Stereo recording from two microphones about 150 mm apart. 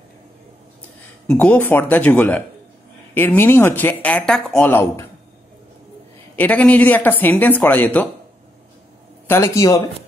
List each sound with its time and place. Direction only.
1.2 s a woman's voice: 5° left (ahead or behind)
6.3 s a woman's voice: 10° left (ahead or behind)
9.3 s speech: 20° left (ahead or behind)